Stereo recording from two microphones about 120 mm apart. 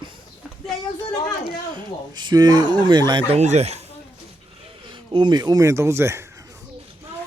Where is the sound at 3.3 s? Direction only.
70° right (ahead or behind).